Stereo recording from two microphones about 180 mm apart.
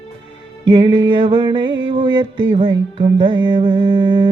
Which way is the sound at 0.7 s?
30° right (ahead or behind).